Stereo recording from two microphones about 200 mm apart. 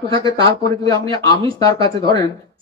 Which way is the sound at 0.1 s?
20° left (ahead or behind).